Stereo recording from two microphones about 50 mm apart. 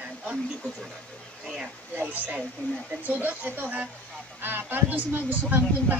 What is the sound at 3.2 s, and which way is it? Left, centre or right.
Speech, right.